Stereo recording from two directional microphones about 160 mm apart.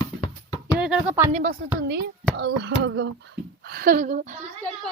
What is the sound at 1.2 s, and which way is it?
Speech, 45° right (ahead or behind).